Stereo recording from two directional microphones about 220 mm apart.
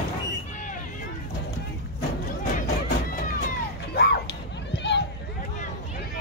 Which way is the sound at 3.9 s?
50° left (ahead or behind).